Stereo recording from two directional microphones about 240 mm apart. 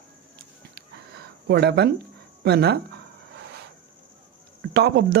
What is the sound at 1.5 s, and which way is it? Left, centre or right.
Speech, right.